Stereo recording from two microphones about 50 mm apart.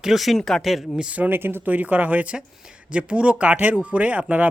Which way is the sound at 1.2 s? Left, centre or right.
Right.